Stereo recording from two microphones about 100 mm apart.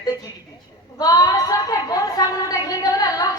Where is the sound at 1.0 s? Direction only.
40° left (ahead or behind).